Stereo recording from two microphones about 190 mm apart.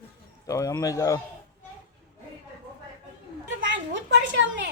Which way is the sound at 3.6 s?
70° right (ahead or behind).